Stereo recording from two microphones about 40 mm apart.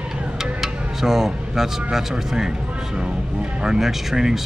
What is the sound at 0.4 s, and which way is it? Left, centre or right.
Speech, centre.